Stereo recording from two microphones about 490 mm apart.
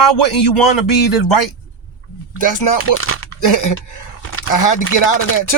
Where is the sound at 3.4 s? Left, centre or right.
Left.